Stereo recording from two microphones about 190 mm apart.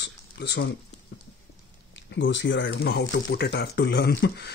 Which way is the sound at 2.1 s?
70° left (ahead or behind).